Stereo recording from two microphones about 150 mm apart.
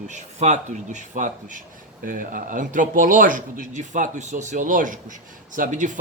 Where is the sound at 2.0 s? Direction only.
65° right (ahead or behind).